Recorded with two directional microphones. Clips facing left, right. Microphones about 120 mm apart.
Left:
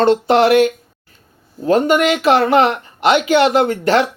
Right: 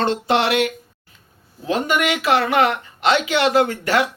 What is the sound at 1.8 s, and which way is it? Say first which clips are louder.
Speech: left 6 dB; 30° left (ahead or behind).